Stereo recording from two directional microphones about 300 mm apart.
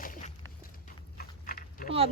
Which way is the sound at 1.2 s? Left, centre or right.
Left.